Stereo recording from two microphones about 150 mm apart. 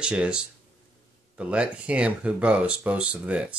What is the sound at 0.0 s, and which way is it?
Speech, 5° right (ahead or behind).